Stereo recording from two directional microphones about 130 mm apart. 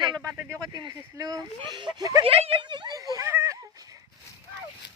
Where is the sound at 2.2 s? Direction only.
45° right (ahead or behind); by 3.5 s 20° right (ahead or behind).